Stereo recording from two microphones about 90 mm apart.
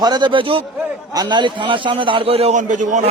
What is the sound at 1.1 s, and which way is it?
A man's voice, 55° right (ahead or behind).